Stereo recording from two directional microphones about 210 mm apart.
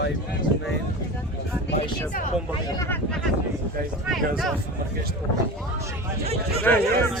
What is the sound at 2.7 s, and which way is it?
Speech, 10° left (ahead or behind).